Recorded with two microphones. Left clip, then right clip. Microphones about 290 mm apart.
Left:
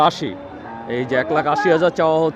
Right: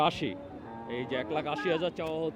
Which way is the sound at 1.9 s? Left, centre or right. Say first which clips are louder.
Left 17 dB; left.